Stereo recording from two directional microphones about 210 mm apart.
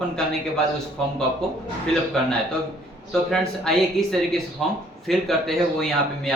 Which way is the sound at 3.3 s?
Centre (ahead or behind).